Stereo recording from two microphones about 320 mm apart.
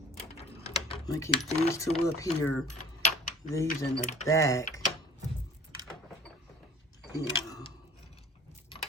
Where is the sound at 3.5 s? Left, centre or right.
Centre.